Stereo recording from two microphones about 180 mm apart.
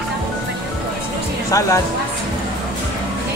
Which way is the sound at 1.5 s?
15° left (ahead or behind).